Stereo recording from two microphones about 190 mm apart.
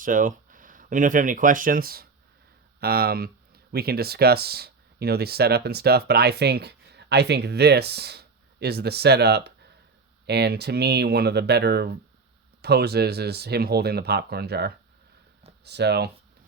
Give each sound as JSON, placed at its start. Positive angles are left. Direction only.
{"t": 0.0, "sound": "speech", "side_deg": -45}